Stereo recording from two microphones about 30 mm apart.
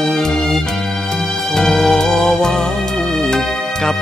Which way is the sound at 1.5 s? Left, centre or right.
Centre.